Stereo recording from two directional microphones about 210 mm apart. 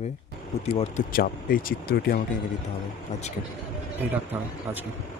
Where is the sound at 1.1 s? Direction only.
45° left (ahead or behind).